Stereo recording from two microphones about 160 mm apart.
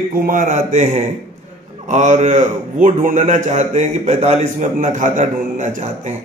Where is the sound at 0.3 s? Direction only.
50° right (ahead or behind).